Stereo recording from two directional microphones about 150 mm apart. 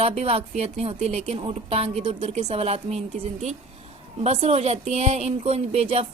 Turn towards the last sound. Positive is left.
turn(degrees=-45)  # may be behind; listen again after turning